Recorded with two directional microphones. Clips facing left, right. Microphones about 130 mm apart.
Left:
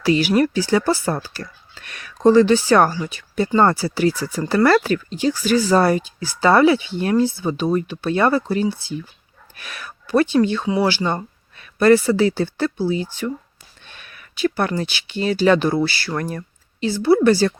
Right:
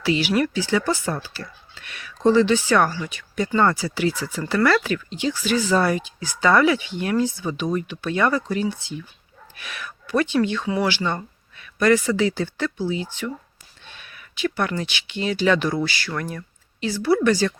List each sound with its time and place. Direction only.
0.0 s speech: 45° left (ahead or behind)